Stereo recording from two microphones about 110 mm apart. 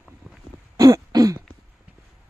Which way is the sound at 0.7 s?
35° right (ahead or behind).